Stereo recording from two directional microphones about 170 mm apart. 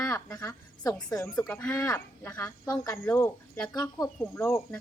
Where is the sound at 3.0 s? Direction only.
10° left (ahead or behind).